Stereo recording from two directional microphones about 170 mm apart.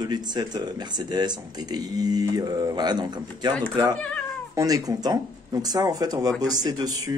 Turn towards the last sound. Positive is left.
turn(degrees=-20)  # may be behind; listen again after turning